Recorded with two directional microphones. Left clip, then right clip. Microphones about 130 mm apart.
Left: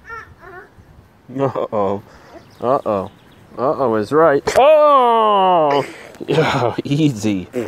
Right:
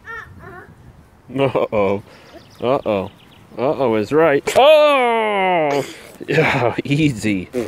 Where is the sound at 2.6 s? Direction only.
35° right (ahead or behind).